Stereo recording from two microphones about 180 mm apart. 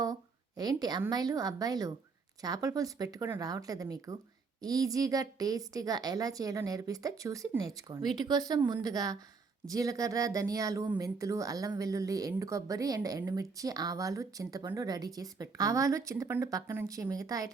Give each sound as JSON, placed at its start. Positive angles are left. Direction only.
{"t": 0.0, "sound": "a woman's voice", "side_deg": -20}